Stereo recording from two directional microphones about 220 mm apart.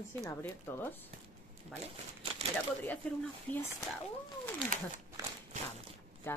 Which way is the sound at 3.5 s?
10° left (ahead or behind).